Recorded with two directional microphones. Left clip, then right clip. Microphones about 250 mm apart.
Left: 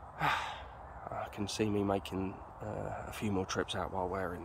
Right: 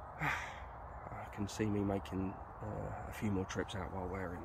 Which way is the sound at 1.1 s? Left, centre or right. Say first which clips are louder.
Left 6 dB; centre.